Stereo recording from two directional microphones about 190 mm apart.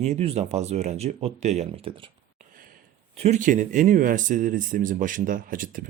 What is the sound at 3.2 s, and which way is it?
Speech, 40° right (ahead or behind).